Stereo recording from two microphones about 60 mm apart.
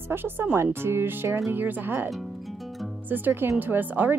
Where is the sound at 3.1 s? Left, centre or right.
Right.